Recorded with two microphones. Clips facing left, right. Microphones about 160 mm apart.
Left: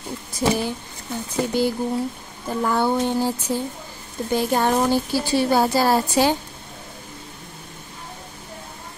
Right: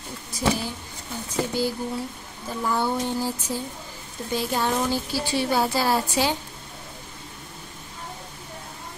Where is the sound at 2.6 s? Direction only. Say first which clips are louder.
Left 4 dB; 60° left (ahead or behind).